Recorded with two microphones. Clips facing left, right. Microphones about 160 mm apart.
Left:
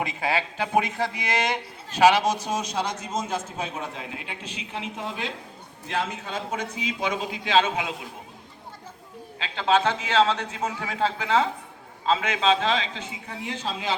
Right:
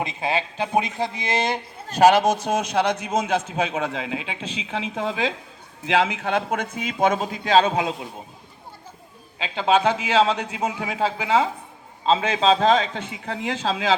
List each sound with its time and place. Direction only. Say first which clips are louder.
0.0 s speech: right 2 dB; 20° right (ahead or behind)
1.9 s a man's voice: right 3 dB; 45° right (ahead or behind); by 6.7 s 60° right (ahead or behind)
6.7 s a man's voice: right 9 dB; 50° right (ahead or behind)
9.4 s a man's voice: right 3 dB; 15° right (ahead or behind)
12.0 s a man's voice: right 4 dB; 30° right (ahead or behind); by 13.9 s 90° right